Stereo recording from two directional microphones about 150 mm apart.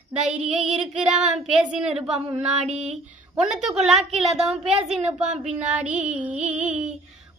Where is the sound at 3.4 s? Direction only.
5° right (ahead or behind).